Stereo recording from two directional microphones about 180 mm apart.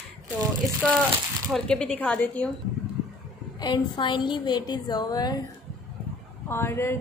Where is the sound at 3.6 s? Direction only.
25° left (ahead or behind).